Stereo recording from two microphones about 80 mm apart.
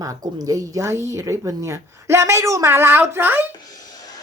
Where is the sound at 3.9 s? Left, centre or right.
Left.